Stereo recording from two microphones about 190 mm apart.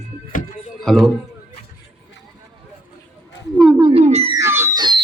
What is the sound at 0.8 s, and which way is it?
Speech, centre (ahead or behind).